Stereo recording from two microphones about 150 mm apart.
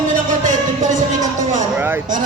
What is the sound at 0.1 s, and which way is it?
Music, 55° right (ahead or behind).